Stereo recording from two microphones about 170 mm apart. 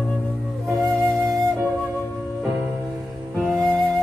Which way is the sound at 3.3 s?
Centre (ahead or behind).